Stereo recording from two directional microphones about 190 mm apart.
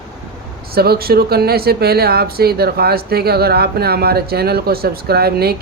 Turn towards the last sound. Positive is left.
turn(degrees=-55)  # may be behind; listen again after turning